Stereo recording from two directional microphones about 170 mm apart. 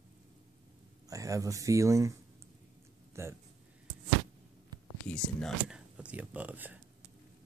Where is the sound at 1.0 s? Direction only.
20° right (ahead or behind).